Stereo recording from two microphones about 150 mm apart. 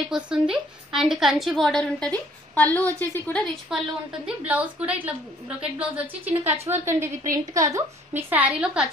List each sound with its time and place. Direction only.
0.1 s a woman's voice: 5° right (ahead or behind); by 3.4 s 10° left (ahead or behind)
3.7 s a woman's voice: centre (ahead or behind)